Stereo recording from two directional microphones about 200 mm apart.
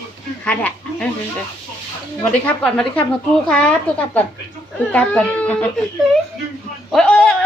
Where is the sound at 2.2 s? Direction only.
5° left (ahead or behind).